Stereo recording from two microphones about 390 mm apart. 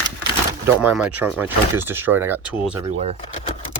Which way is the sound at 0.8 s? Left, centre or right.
Centre.